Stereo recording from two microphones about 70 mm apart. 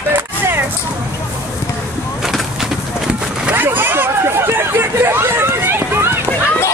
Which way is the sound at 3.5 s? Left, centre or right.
Right.